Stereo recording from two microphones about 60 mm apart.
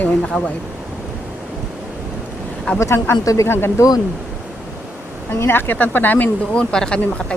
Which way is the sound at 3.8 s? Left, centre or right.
Left.